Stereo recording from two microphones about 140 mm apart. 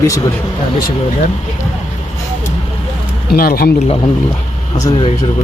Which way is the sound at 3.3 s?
90° left.